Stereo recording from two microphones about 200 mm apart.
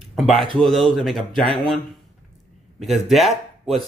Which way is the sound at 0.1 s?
Centre (ahead or behind).